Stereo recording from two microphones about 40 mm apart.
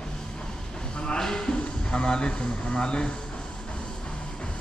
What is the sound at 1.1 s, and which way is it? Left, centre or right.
Speech, centre.